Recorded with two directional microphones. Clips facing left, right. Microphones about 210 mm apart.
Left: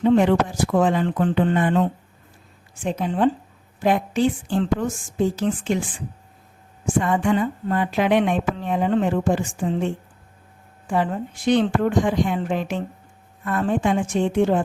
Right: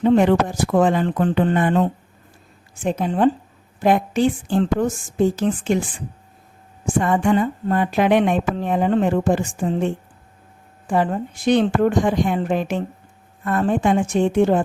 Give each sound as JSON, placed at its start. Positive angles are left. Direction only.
{"t": 0.0, "sound": "a woman's voice", "side_deg": -45}
{"t": 6.8, "sound": "a woman's voice", "side_deg": -45}
{"t": 10.8, "sound": "a woman's voice", "side_deg": -45}